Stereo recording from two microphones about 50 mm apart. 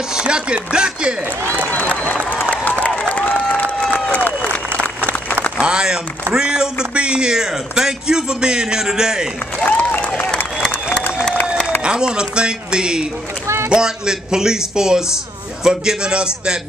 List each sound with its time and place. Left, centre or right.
0.1 s speech: centre
1.7 s applause: left
5.6 s a man's voice: centre
9.7 s speech: left
10.0 s applause: left
11.8 s a man's voice: centre